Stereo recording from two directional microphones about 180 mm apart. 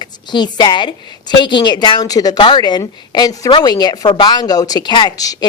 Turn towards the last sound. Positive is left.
turn(degrees=20)  # may be behind; listen again after turning